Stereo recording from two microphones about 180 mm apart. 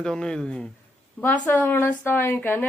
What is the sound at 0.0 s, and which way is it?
A woman's voice, 5° left (ahead or behind).